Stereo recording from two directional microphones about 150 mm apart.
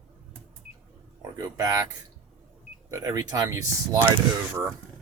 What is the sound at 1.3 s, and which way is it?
Speech, 25° right (ahead or behind).